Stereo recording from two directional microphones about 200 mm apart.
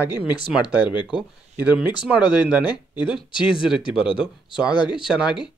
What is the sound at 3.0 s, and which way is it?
Speech, 25° left (ahead or behind).